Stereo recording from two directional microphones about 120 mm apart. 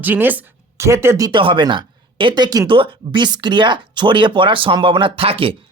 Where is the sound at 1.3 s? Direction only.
45° right (ahead or behind).